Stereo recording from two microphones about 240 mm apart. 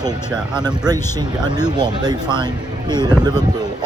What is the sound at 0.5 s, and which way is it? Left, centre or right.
Speech, centre.